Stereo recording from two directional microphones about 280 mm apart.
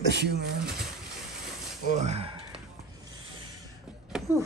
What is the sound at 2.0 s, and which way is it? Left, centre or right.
Speech, right.